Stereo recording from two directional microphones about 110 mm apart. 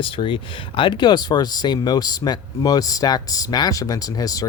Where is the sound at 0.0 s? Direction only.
50° left (ahead or behind).